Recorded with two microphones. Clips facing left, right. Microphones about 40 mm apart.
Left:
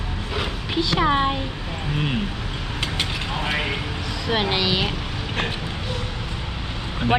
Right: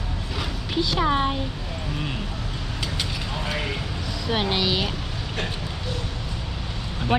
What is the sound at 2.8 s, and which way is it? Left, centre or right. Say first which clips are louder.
Vehicle: left 4 dB; left.